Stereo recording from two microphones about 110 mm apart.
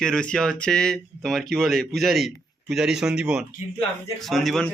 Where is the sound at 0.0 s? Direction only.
10° left (ahead or behind).